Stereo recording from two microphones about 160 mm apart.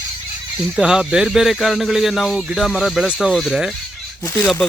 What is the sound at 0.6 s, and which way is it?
Speech, 5° right (ahead or behind).